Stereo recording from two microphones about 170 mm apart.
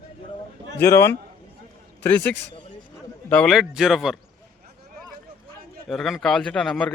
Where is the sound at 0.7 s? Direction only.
15° left (ahead or behind).